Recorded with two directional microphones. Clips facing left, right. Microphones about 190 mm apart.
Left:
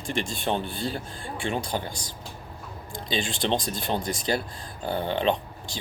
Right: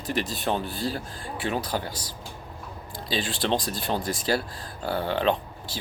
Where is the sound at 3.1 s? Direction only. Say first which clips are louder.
Even; 5° right (ahead or behind).